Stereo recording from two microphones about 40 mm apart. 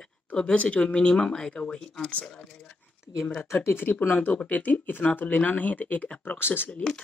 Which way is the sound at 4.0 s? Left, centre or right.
Left.